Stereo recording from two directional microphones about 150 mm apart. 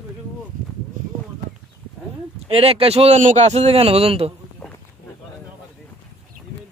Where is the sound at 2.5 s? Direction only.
40° right (ahead or behind).